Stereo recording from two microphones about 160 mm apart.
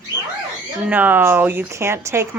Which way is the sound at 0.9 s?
10° right (ahead or behind).